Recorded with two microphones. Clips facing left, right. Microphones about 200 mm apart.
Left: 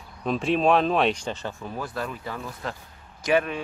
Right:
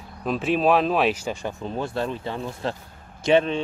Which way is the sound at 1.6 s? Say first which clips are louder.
Right 7 dB; 25° right (ahead or behind).